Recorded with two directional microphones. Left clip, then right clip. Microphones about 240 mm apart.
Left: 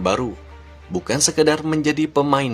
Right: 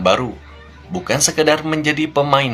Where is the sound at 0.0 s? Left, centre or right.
Left.